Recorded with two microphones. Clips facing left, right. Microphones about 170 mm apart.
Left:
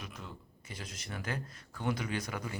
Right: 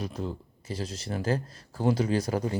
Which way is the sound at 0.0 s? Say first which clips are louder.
Right 13 dB; 35° right (ahead or behind).